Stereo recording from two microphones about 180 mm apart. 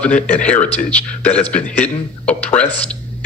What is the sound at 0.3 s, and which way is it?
A man's voice, 10° left (ahead or behind).